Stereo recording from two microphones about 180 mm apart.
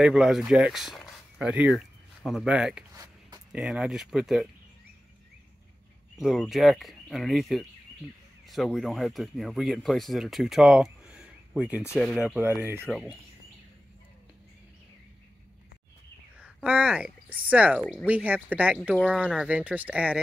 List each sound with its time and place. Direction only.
0.0 s speech: 5° right (ahead or behind)
6.1 s speech: centre (ahead or behind)
11.8 s speech: 10° left (ahead or behind)
12.3 s speech: 10° right (ahead or behind)
12.8 s speech: centre (ahead or behind)
16.3 s speech: 5° right (ahead or behind)